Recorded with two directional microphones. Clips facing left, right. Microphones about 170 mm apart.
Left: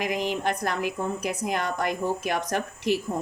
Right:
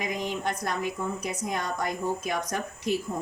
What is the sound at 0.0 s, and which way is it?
Speech, 90° left.